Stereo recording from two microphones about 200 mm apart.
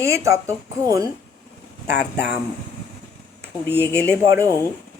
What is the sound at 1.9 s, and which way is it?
Speech, 55° left (ahead or behind).